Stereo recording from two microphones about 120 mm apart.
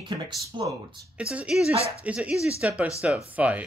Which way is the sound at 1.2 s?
10° right (ahead or behind).